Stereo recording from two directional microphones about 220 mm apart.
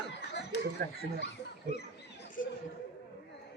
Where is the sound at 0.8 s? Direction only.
45° right (ahead or behind).